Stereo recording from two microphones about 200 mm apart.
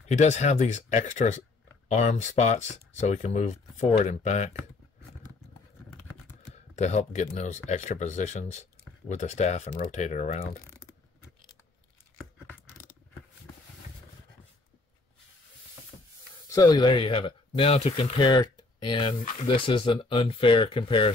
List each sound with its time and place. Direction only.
0.0 s speech: 35° left (ahead or behind)
6.5 s speech: 35° left (ahead or behind)
16.4 s speech: 20° left (ahead or behind)